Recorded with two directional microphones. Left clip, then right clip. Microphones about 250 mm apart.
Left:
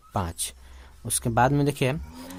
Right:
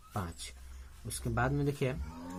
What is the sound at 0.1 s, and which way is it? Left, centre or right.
Speech, left.